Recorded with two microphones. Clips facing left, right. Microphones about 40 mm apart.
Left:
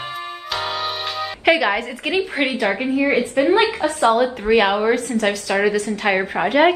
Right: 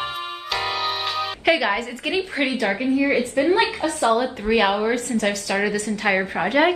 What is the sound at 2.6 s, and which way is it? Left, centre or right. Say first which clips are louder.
A woman's voice: left 1 dB; left.